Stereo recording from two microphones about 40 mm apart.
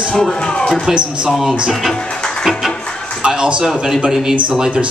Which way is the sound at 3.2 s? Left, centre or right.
Right.